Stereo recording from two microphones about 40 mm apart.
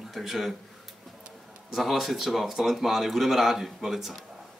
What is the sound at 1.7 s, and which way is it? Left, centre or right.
Speech, centre.